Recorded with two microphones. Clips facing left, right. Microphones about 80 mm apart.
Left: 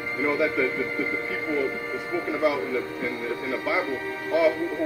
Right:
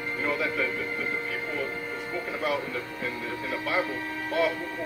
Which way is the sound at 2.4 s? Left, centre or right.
Centre.